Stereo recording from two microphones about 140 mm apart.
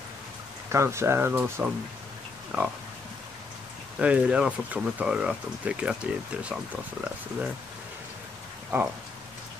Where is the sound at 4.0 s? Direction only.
10° right (ahead or behind).